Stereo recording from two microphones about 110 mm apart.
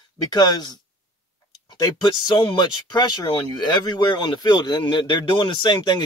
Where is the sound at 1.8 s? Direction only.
45° left (ahead or behind).